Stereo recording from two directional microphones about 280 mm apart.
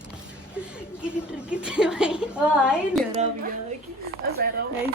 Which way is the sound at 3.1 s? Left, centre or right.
Right.